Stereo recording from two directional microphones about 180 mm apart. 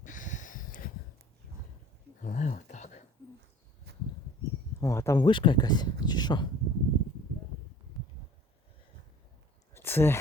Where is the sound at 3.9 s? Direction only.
65° right (ahead or behind).